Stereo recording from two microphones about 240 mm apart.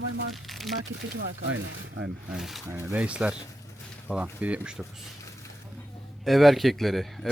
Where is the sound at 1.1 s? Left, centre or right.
Right.